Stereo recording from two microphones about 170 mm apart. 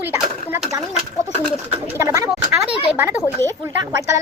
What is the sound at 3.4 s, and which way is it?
Speech, 20° right (ahead or behind).